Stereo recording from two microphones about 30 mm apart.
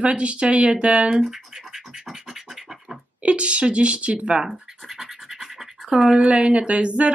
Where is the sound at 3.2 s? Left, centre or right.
Right.